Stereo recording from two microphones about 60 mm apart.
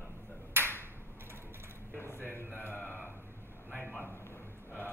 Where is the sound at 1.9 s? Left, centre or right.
Left.